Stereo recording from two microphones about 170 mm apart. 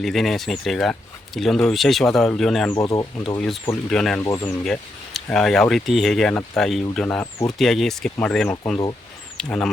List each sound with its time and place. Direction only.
0.0 s speech: centre (ahead or behind)
2.7 s speech: 20° left (ahead or behind)
3.3 s speech: centre (ahead or behind)
4.2 s speech: 15° left (ahead or behind)
4.6 s speech: 5° left (ahead or behind)